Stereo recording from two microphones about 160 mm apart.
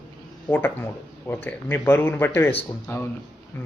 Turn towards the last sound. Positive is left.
turn(degrees=15)  # may be behind; listen again after turning